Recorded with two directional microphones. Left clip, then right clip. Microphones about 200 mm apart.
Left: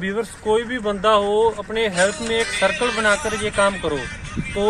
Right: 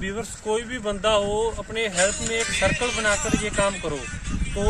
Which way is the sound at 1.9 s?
55° right (ahead or behind).